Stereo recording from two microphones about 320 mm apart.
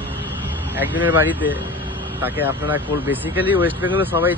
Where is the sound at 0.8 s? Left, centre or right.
Centre.